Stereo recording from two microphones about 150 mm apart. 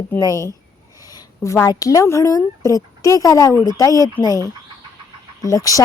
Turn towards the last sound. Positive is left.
turn(degrees=20)  # may be behind; listen again after turning